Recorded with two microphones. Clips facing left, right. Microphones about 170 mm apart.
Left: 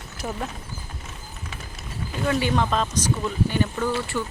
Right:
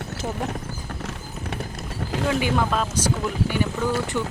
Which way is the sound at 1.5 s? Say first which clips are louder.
Right 8 dB; 60° right (ahead or behind).